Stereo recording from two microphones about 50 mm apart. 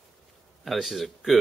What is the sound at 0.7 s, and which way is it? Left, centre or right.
Speech, centre.